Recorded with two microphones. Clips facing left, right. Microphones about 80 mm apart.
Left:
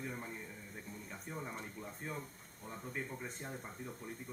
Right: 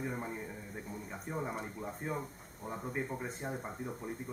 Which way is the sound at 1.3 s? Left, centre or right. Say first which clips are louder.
Right 7 dB; centre.